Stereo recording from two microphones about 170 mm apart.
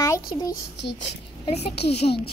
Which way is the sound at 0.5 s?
90° left.